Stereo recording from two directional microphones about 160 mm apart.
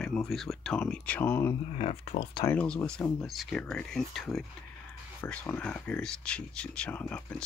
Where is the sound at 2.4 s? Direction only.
10° left (ahead or behind).